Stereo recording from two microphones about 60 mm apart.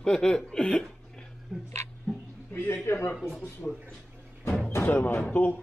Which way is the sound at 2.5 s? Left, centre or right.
Left.